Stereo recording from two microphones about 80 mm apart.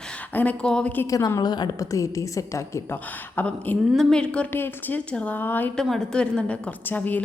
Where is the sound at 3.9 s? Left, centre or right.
Centre.